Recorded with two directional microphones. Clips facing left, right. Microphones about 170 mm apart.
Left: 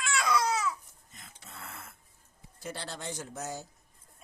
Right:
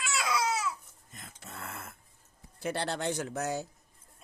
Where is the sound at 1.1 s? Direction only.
50° right (ahead or behind).